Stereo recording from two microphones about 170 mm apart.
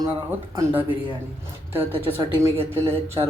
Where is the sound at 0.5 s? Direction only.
10° right (ahead or behind).